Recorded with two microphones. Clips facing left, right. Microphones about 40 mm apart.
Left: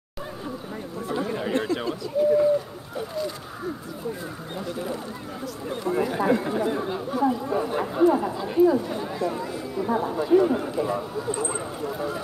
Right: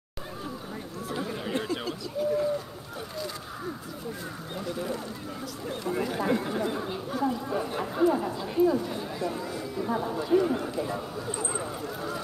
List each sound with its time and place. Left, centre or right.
1.0 s chatter: centre
1.8 s a sound: centre
4.6 s speech: centre